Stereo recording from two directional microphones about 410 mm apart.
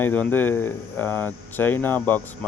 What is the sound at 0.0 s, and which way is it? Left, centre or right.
Speech, centre.